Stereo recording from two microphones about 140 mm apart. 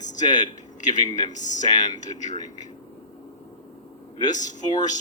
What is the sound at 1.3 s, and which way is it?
Speech, 60° left (ahead or behind).